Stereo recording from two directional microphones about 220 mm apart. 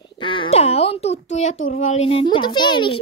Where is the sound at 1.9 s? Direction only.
25° left (ahead or behind).